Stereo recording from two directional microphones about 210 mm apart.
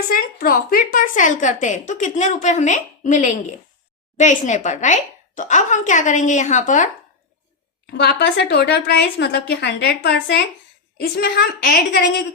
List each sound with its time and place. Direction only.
0.1 s a woman's voice: 45° left (ahead or behind)
7.9 s a woman's voice: 50° left (ahead or behind)